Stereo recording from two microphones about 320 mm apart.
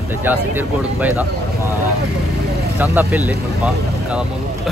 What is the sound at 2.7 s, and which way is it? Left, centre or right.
Speech, centre.